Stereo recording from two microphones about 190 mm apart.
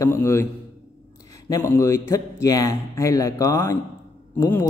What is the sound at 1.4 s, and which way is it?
A man's voice, 15° left (ahead or behind).